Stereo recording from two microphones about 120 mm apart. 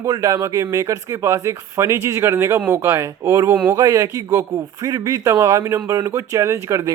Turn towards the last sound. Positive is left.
turn(degrees=-25)  # may be behind; listen again after turning